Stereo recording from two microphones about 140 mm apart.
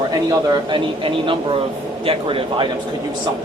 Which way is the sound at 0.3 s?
30° right (ahead or behind).